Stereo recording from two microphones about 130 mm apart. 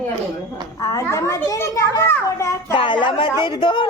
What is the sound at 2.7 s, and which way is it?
Speech, 40° left (ahead or behind).